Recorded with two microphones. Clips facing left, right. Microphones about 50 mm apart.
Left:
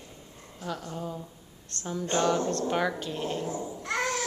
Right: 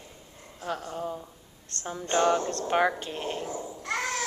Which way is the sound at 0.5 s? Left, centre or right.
Right.